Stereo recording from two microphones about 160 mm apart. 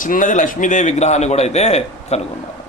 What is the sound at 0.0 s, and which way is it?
A man's voice, 55° left (ahead or behind).